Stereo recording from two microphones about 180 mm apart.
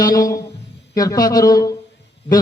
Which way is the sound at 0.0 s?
20° left (ahead or behind).